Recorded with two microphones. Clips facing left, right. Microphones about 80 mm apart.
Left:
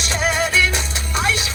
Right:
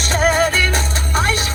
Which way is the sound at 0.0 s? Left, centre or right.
Right.